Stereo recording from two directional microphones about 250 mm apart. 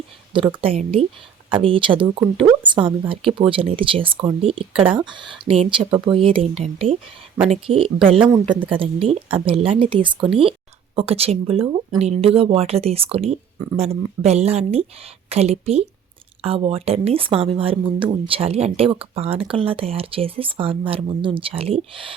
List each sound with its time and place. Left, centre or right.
0.6 s speech: right
8.3 s a woman's voice: centre
8.8 s speech: right